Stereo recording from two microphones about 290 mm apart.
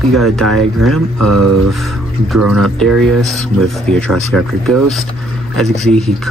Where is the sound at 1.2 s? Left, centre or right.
Right.